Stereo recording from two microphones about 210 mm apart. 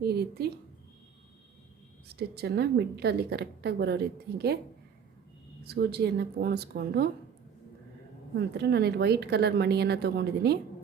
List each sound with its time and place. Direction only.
0.0 s a woman's voice: 50° right (ahead or behind)
2.1 s a woman's voice: 50° right (ahead or behind)
5.6 s a woman's voice: 50° right (ahead or behind)
8.4 s a woman's voice: 50° right (ahead or behind)